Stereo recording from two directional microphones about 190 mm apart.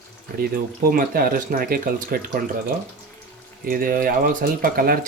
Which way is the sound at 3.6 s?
50° right (ahead or behind).